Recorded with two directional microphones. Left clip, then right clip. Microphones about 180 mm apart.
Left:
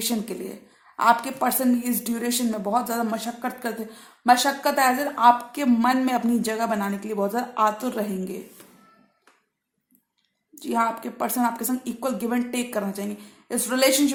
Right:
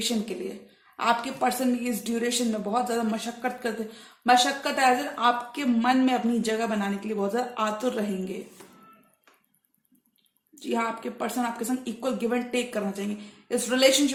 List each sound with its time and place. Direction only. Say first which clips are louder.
0.9 s a woman's voice: left 5 dB; 50° left (ahead or behind)
10.5 s a woman's voice: left 5 dB; 45° left (ahead or behind)